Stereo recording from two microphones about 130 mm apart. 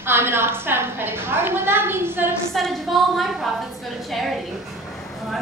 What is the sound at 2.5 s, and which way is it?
A woman's voice, centre (ahead or behind).